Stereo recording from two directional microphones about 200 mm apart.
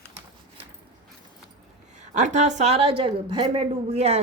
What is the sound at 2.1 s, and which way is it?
A woman's voice, 35° right (ahead or behind).